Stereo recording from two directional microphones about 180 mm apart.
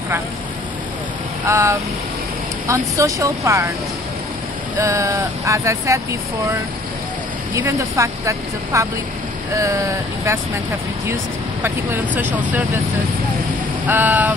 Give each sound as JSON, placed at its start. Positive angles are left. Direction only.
{"t": 1.4, "sound": "speech", "side_deg": -15}
{"t": 4.7, "sound": "speech", "side_deg": -15}
{"t": 7.5, "sound": "speech", "side_deg": -15}
{"t": 11.6, "sound": "speech", "side_deg": -10}
{"t": 13.8, "sound": "speech", "side_deg": -10}